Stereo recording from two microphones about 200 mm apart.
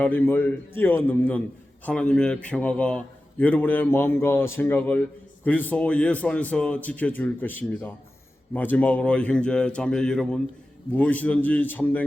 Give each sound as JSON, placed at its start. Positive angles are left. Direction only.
{"t": 0.0, "sound": "a man's voice", "side_deg": 10}